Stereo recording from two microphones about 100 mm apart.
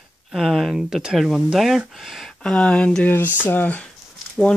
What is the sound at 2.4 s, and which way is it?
Speech, 10° left (ahead or behind).